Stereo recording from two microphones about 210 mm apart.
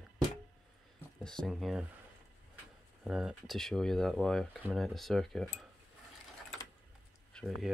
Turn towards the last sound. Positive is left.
turn(degrees=0)  # may be behind; listen again after turning